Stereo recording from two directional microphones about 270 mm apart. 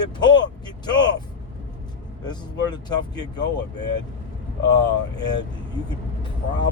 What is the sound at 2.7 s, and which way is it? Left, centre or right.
Speech, centre.